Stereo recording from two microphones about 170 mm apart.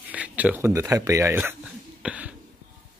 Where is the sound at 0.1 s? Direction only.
10° right (ahead or behind).